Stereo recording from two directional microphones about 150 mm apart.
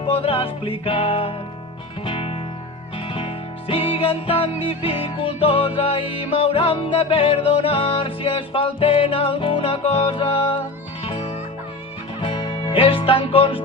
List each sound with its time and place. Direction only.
0.0 s music: 40° left (ahead or behind)